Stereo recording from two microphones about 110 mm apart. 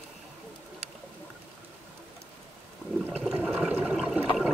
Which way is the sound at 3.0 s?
10° right (ahead or behind).